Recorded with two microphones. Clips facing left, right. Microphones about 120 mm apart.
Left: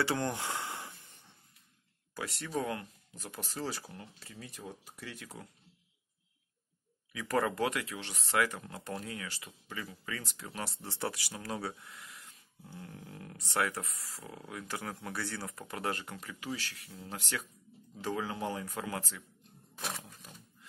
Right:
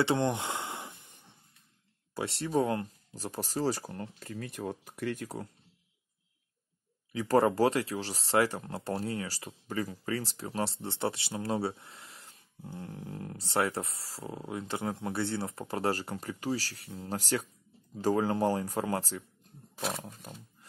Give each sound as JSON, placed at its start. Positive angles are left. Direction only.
{"t": 0.0, "sound": "a sound", "side_deg": -20}
{"t": 2.1, "sound": "speech", "side_deg": -30}
{"t": 7.1, "sound": "speech", "side_deg": -30}